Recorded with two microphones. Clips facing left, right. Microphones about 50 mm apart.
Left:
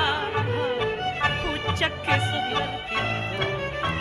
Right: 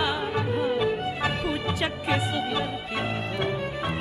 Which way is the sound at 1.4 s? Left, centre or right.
Left.